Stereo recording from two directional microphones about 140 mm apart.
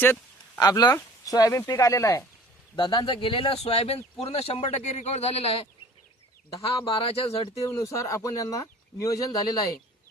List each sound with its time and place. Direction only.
0.0 s a sound: 15° left (ahead or behind)
0.6 s speech: 25° left (ahead or behind)
2.7 s speech: 30° left (ahead or behind)
6.7 s speech: 40° left (ahead or behind)
7.6 s speech: 20° left (ahead or behind)